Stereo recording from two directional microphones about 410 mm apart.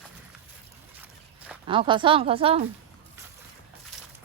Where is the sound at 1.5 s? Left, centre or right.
Centre.